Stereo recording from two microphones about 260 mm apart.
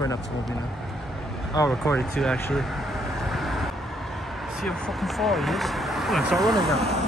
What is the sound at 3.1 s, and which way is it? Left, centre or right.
Vehicle, centre.